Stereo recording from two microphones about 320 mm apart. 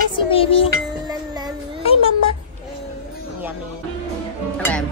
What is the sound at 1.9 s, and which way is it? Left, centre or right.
Cat, centre.